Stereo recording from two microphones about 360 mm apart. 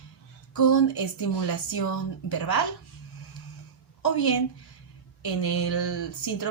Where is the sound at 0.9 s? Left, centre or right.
Left.